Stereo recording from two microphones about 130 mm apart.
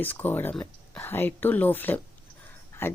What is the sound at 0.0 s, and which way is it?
Speech, 15° left (ahead or behind).